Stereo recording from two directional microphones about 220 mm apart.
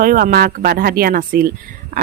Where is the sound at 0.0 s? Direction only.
40° right (ahead or behind).